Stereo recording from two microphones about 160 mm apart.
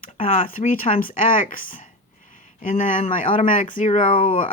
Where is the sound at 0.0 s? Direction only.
55° left (ahead or behind).